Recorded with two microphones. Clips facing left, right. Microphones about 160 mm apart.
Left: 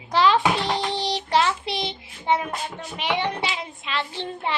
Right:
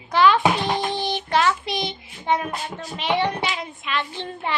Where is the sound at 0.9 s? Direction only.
30° left (ahead or behind).